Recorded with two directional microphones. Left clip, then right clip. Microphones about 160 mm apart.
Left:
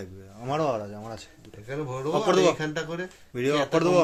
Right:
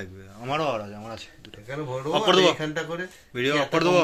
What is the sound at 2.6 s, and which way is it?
Speech, 35° left (ahead or behind).